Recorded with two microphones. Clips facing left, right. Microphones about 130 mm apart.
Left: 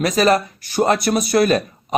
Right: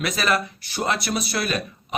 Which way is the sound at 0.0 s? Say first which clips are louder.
Left 8 dB; 40° left (ahead or behind).